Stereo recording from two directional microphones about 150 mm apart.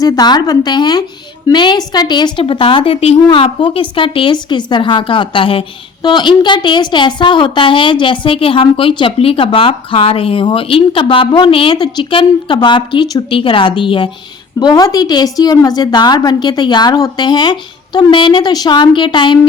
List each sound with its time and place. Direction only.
0.0 s a woman's voice: 25° left (ahead or behind)